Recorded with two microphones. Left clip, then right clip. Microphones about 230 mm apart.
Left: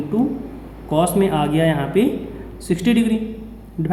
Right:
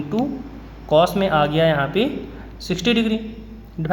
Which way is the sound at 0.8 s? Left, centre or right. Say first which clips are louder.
Right 2 dB; centre.